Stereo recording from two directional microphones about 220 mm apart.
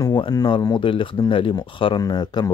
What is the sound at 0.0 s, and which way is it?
Speech, 20° left (ahead or behind).